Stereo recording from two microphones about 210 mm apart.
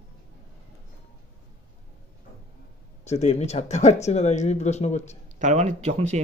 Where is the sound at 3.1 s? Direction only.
30° left (ahead or behind).